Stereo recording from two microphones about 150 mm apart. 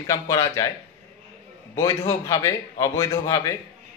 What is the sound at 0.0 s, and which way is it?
Speech, 25° left (ahead or behind).